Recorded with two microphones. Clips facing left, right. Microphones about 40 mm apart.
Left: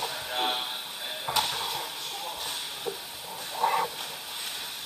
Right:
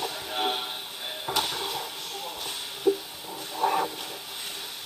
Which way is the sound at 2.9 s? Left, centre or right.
Left.